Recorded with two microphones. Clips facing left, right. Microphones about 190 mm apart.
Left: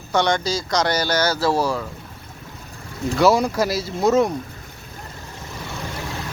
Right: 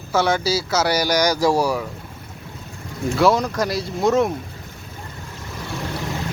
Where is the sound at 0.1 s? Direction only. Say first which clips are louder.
Right 1 dB; 5° right (ahead or behind).